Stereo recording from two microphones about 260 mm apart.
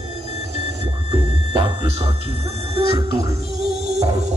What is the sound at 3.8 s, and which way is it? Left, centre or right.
Music, right.